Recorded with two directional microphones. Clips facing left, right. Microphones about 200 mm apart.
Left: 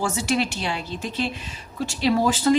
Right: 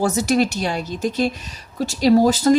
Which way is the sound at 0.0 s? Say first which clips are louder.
Right 6 dB; 40° right (ahead or behind).